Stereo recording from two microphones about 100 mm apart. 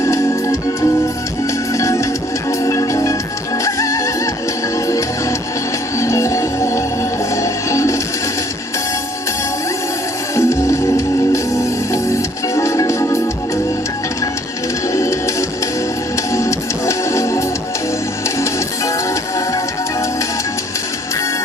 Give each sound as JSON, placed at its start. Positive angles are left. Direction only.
{"t": 0.0, "sound": "organ", "side_deg": 30}
{"t": 1.7, "sound": "music", "side_deg": 30}
{"t": 6.0, "sound": "music", "side_deg": 30}
{"t": 10.3, "sound": "music", "side_deg": 30}
{"t": 14.9, "sound": "music", "side_deg": 30}